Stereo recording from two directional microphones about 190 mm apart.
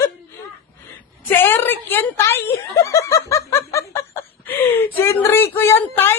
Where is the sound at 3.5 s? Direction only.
15° left (ahead or behind).